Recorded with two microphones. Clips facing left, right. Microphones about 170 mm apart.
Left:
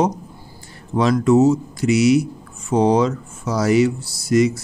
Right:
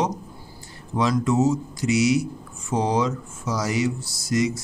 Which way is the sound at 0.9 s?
60° left (ahead or behind).